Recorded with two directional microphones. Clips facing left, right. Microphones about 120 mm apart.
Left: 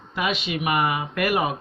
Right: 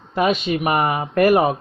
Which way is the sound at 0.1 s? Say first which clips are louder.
Right 7 dB; 45° right (ahead or behind).